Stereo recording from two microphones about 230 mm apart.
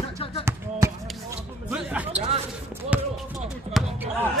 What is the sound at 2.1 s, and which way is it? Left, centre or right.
Speech, right.